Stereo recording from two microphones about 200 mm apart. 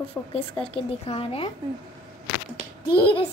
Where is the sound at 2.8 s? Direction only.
25° left (ahead or behind).